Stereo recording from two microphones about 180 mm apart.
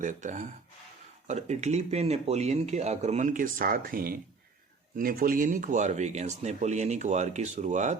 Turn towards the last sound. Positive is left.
turn(degrees=-40)  # may be behind; listen again after turning